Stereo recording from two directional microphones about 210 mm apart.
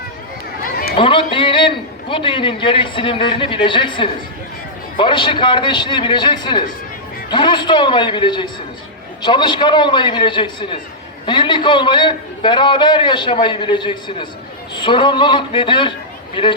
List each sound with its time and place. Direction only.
0.9 s a man's voice: 25° left (ahead or behind)